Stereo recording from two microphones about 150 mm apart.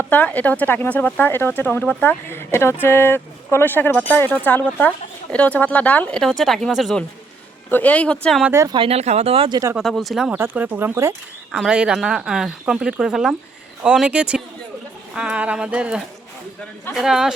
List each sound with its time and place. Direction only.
0.1 s speech: 10° left (ahead or behind)
7.7 s speech: 10° left (ahead or behind)
8.4 s speech: 20° right (ahead or behind)
8.7 s speech: 40° right (ahead or behind)
9.7 s speech: centre (ahead or behind)
10.3 s speech: 15° right (ahead or behind)
11.5 s speech: 5° right (ahead or behind)